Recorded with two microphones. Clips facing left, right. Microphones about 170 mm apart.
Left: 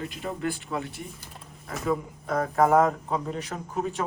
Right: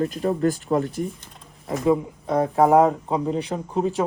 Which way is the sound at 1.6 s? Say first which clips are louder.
Right 8 dB; 25° right (ahead or behind).